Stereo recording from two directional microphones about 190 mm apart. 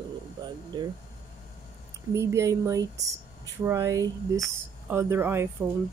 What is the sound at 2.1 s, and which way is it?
Speech, 15° right (ahead or behind).